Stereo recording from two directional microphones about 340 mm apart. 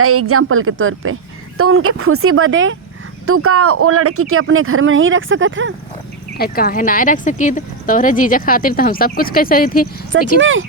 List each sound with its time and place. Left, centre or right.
0.0 s speech: right
6.3 s speech: left
10.3 s speech: right